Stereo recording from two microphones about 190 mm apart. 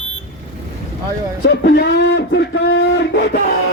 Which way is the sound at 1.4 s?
65° left (ahead or behind).